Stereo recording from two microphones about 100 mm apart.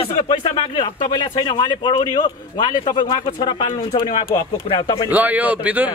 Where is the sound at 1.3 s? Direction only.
45° left (ahead or behind).